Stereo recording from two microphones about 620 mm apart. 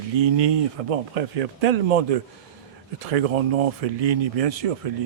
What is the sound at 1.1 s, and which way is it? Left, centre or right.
A man's voice, right.